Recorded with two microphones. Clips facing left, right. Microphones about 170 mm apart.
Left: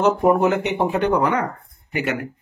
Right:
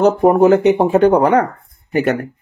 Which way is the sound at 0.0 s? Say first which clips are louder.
Right 6 dB; 35° right (ahead or behind).